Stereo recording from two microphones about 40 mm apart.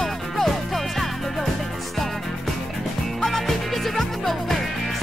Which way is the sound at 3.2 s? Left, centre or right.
Centre.